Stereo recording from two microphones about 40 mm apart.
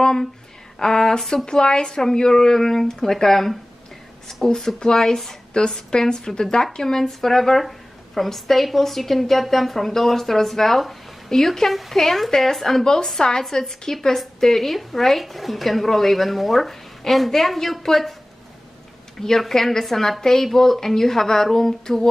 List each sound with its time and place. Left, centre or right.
0.0 s a sound: centre
0.7 s a woman's voice: centre
19.1 s a woman's voice: centre